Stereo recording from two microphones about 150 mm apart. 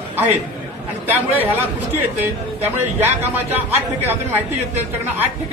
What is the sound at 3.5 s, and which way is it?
Speech, 15° right (ahead or behind).